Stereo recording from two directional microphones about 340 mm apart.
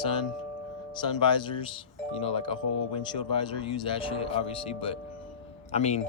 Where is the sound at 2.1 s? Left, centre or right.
Centre.